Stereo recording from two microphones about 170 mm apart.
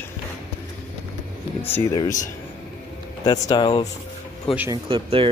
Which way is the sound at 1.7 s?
20° left (ahead or behind).